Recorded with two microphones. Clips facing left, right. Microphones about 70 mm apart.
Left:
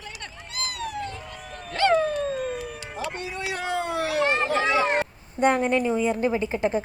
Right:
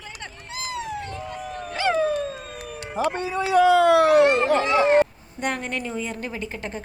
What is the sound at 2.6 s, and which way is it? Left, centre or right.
Music, right.